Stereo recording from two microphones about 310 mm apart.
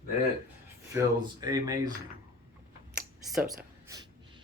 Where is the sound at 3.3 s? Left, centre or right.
Centre.